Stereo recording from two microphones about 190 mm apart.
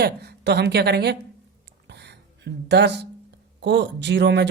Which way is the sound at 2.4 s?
65° right (ahead or behind).